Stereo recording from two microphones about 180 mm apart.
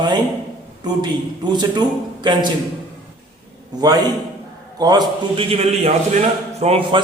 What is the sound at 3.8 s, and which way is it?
A man's voice, 20° right (ahead or behind).